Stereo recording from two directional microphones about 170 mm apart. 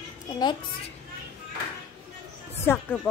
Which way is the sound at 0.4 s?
25° left (ahead or behind).